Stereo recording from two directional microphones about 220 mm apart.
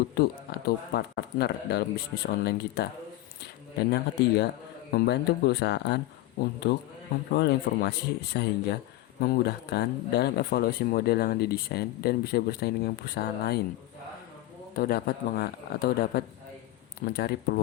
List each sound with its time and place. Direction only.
0.2 s speech: 45° left (ahead or behind)
14.8 s speech: 45° left (ahead or behind)